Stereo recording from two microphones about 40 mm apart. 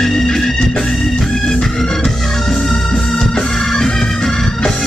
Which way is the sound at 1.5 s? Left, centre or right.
Centre.